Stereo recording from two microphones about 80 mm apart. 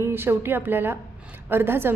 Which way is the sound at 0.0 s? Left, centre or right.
Right.